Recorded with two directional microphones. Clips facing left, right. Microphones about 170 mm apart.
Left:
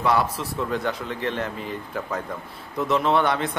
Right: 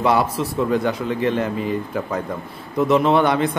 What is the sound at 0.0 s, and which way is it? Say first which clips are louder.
Speech: right 4 dB; 20° right (ahead or behind).